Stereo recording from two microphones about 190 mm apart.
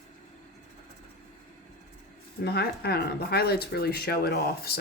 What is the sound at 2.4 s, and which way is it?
Speech, 55° left (ahead or behind).